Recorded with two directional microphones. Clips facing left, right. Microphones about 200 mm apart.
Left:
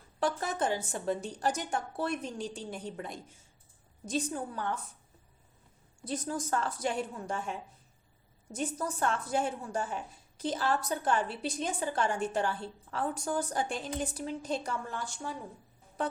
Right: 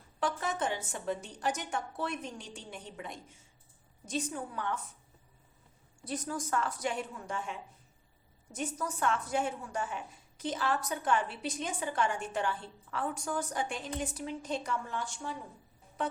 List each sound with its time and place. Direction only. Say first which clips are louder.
0.2 s a woman's voice: left 2 dB; 35° left (ahead or behind)
6.1 s a woman's voice: left 2 dB; 25° left (ahead or behind)
8.5 s a woman's voice: left 2 dB; 30° left (ahead or behind)